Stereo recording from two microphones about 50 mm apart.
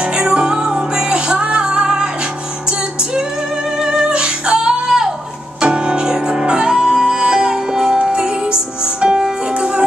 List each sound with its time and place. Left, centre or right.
0.0 s music: centre
3.7 s music: centre